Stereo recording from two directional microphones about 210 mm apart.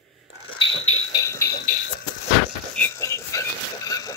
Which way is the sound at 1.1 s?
15° left (ahead or behind).